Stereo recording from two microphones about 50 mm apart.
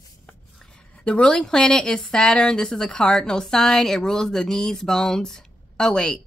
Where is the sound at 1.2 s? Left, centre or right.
Centre.